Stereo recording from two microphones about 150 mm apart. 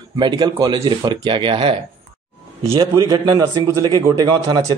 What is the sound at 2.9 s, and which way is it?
Speech, 25° right (ahead or behind).